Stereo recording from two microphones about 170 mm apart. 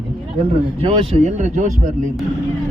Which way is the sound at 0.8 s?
40° right (ahead or behind).